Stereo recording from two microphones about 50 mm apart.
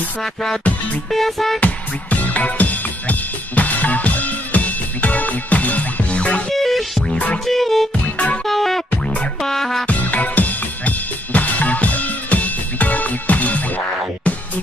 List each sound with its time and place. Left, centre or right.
0.2 s music: centre
1.6 s music: left
6.5 s music: centre
8.9 s music: left
9.4 s music: centre
9.8 s drum kit: left